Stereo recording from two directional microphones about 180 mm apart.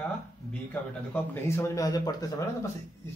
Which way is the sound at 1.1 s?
15° left (ahead or behind).